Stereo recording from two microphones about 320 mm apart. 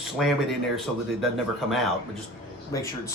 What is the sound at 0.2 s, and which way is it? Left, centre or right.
Speech, centre.